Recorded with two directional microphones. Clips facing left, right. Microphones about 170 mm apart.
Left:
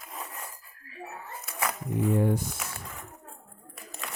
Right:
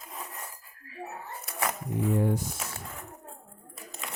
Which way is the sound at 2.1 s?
60° left (ahead or behind).